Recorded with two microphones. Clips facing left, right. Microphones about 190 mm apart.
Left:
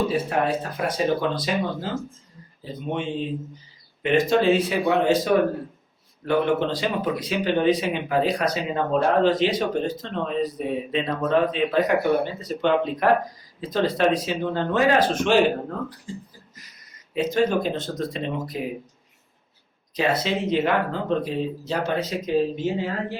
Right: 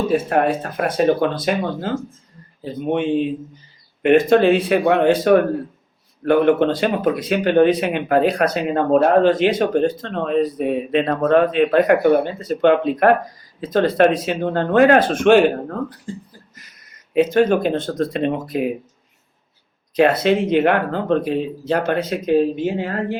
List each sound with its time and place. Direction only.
0.1 s speech: 55° right (ahead or behind)
2.9 s speech: 55° right (ahead or behind)
20.0 s speech: 60° right (ahead or behind)